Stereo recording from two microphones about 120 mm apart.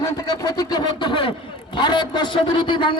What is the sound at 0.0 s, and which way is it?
A man's voice, 30° left (ahead or behind).